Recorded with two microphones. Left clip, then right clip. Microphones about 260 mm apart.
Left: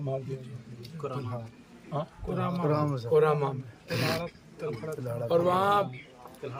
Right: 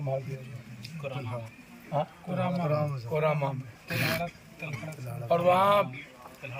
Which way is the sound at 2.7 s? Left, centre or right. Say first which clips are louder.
Left 1 dB; left.